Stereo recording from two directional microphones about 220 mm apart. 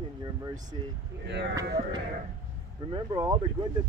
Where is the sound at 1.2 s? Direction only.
50° right (ahead or behind).